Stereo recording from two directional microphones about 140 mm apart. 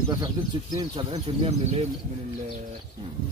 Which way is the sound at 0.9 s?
40° right (ahead or behind).